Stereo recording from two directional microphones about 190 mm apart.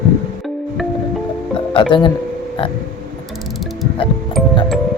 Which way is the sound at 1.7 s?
25° left (ahead or behind).